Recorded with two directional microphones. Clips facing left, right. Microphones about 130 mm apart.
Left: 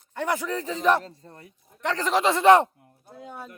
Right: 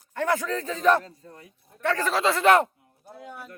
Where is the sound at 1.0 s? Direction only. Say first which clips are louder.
Left 1 dB; 30° left (ahead or behind).